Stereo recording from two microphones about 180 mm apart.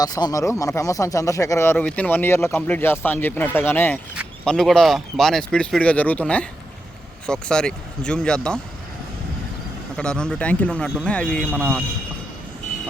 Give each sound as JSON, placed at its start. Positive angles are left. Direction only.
{"t": 0.0, "sound": "speech", "side_deg": 20}
{"t": 10.0, "sound": "speech", "side_deg": 5}